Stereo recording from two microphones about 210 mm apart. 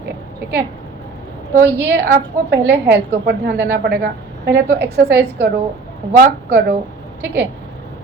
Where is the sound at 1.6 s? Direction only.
50° right (ahead or behind).